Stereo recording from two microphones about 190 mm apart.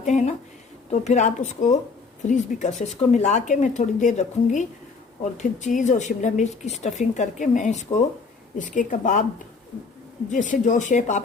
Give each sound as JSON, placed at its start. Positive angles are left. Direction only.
{"t": 0.0, "sound": "a sound", "side_deg": 40}
{"t": 0.9, "sound": "a woman's voice", "side_deg": 35}
{"t": 10.2, "sound": "a woman's voice", "side_deg": 40}